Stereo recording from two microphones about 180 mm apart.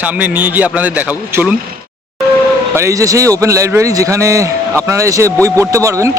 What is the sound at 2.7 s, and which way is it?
A man's voice, 15° right (ahead or behind).